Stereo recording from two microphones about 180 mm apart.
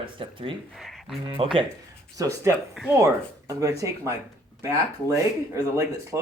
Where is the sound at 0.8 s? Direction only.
Centre (ahead or behind).